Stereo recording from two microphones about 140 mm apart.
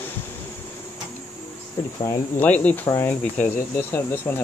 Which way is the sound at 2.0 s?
15° left (ahead or behind).